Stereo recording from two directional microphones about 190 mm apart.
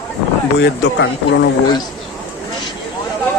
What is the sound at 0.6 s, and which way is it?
Speech, 65° left (ahead or behind).